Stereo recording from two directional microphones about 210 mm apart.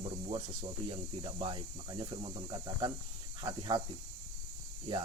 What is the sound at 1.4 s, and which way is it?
Speech, 25° right (ahead or behind).